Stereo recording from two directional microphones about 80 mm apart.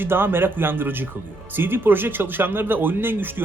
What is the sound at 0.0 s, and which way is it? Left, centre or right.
Speech, right.